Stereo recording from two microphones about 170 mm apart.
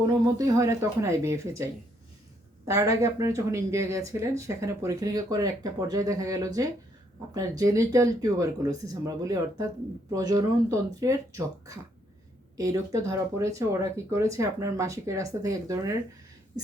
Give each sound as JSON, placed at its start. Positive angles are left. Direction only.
{"t": 0.3, "sound": "speech", "side_deg": -20}